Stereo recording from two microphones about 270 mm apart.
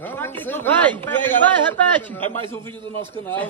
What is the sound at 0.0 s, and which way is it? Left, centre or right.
Speech, centre.